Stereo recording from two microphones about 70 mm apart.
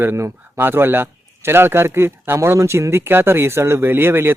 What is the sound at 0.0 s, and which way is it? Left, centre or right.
A man's voice, right.